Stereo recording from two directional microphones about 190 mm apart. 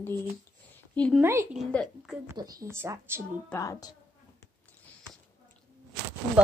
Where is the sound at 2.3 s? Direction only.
20° right (ahead or behind).